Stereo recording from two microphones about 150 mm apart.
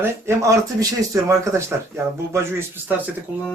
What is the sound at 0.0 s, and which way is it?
Speech, 20° right (ahead or behind).